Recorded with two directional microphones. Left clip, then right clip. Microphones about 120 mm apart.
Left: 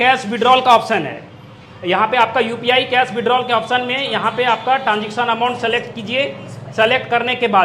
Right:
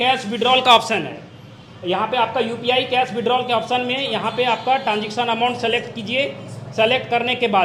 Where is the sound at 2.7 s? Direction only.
25° right (ahead or behind).